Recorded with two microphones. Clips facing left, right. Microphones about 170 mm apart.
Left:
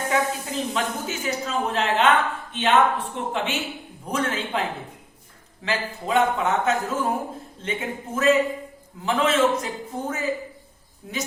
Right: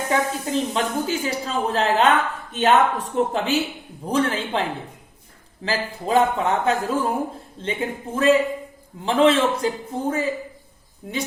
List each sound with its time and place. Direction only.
0.1 s speech: 30° right (ahead or behind)
5.6 s speech: 35° right (ahead or behind)